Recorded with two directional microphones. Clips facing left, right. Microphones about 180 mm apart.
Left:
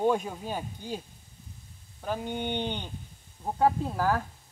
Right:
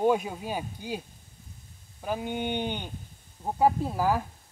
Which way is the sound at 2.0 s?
10° right (ahead or behind).